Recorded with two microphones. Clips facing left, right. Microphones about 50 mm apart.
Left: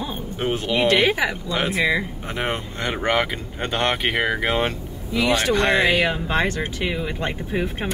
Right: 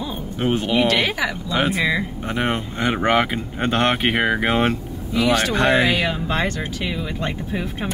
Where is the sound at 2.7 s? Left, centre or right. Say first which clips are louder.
Right 4 dB; centre.